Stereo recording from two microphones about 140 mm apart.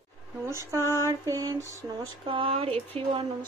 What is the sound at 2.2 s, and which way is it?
Speech, 40° right (ahead or behind).